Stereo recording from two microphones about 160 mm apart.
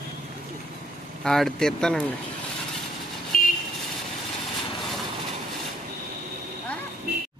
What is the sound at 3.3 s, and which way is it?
Vehicle, 65° left (ahead or behind).